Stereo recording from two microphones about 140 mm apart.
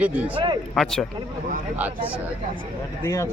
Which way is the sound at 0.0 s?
10° right (ahead or behind).